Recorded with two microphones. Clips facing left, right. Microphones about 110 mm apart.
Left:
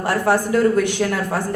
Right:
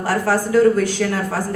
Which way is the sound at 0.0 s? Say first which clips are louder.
Left 1 dB; 20° left (ahead or behind).